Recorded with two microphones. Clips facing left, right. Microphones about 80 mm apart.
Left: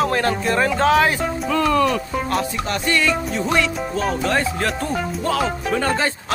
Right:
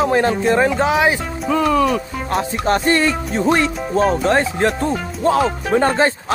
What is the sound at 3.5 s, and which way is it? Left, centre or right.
Speech, right.